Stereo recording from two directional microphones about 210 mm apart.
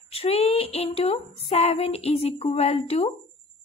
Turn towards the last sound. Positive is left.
turn(degrees=30)  # may be behind; listen again after turning